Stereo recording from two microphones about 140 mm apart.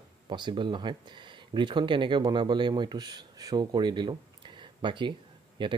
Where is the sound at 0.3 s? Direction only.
35° right (ahead or behind).